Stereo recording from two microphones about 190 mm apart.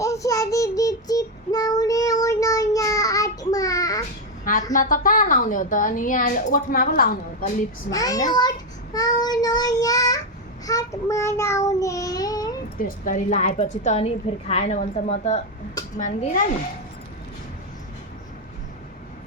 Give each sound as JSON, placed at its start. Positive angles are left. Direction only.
{"t": 0.0, "sound": "child singing", "side_deg": 15}
{"t": 4.7, "sound": "a woman's voice", "side_deg": 45}
{"t": 7.9, "sound": "a child's voice", "side_deg": 20}
{"t": 8.4, "sound": "child singing", "side_deg": 20}
{"t": 13.1, "sound": "a woman's voice", "side_deg": 40}